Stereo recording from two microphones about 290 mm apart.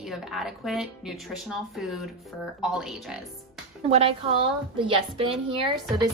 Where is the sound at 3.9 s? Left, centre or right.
Right.